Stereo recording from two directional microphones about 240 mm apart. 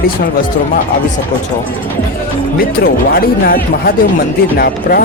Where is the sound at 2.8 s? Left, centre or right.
Left.